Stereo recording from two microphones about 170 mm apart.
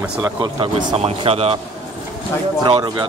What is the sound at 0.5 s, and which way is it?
Speech, 30° right (ahead or behind).